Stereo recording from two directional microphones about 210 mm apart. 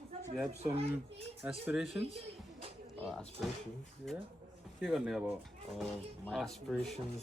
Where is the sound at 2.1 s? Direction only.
25° right (ahead or behind).